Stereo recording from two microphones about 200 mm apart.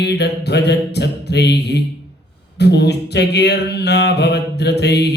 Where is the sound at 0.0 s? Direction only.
55° left (ahead or behind).